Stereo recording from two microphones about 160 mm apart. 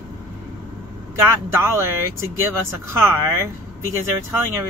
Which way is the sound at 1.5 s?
15° right (ahead or behind).